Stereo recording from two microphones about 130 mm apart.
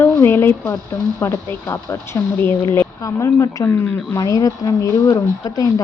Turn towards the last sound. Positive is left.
turn(degrees=25)  # may be behind; listen again after turning